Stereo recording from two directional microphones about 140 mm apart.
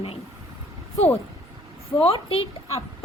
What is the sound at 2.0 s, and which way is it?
Speech, 45° left (ahead or behind).